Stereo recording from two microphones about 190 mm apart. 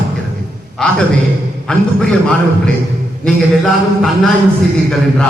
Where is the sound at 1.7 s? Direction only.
5° left (ahead or behind).